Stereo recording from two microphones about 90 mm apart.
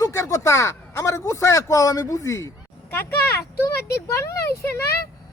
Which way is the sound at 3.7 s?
35° left (ahead or behind).